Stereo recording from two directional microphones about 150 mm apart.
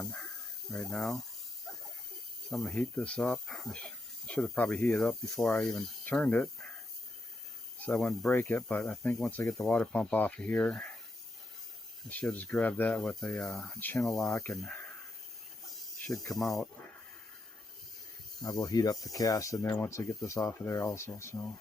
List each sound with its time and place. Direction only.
0.0 s snake: 5° left (ahead or behind)
0.7 s speech: 5° left (ahead or behind)
1.7 s a sound: centre (ahead or behind)
2.5 s speech: centre (ahead or behind)
7.9 s speech: 5° left (ahead or behind)
8.3 s speech: 15° left (ahead or behind)
12.0 s speech: 10° left (ahead or behind)
15.6 s snake: centre (ahead or behind)
16.3 s speech: centre (ahead or behind)
18.4 s speech: 25° left (ahead or behind)